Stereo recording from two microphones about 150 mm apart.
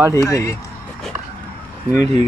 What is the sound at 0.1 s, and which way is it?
Speech, 20° left (ahead or behind).